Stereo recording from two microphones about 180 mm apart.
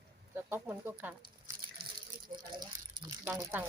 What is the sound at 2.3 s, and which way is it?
Speech, 25° right (ahead or behind).